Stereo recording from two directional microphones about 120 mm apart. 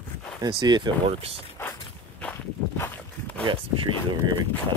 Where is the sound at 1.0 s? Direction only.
55° right (ahead or behind).